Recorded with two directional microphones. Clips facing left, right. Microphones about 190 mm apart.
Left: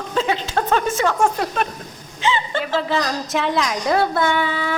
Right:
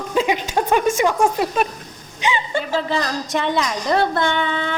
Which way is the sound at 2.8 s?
Centre (ahead or behind).